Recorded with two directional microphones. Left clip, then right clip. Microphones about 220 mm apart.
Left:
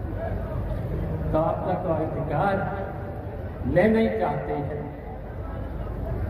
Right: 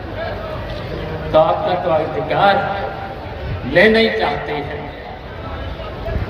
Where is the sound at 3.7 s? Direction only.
55° right (ahead or behind).